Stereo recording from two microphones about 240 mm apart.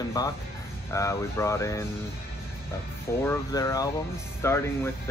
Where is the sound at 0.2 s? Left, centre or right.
Centre.